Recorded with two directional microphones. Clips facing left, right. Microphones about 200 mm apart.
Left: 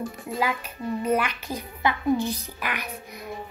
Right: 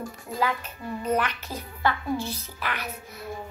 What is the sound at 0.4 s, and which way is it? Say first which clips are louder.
A child's voice: even; 10° left (ahead or behind).